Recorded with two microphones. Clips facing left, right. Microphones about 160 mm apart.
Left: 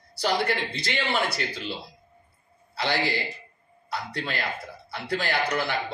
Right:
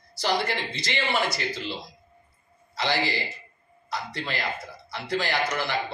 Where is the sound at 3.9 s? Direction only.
60° left (ahead or behind).